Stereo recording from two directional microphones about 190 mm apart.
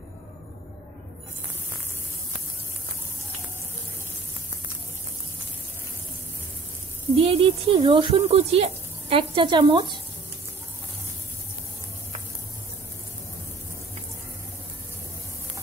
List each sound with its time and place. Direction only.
7.2 s speech: 30° right (ahead or behind)